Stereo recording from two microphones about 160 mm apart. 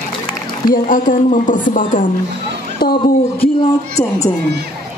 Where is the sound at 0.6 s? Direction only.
60° left (ahead or behind).